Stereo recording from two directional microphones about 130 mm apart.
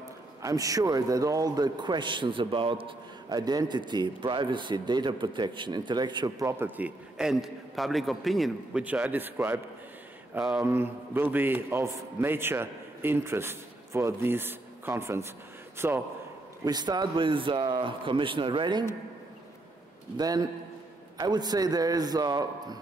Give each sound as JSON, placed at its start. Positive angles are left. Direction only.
{"t": 0.4, "sound": "a man's voice", "side_deg": -25}
{"t": 6.4, "sound": "a man's voice", "side_deg": -20}
{"t": 7.2, "sound": "a man's voice", "side_deg": -5}
{"t": 10.6, "sound": "a man's voice", "side_deg": -15}
{"t": 16.6, "sound": "a man's voice", "side_deg": -30}
{"t": 20.2, "sound": "a man's voice", "side_deg": -30}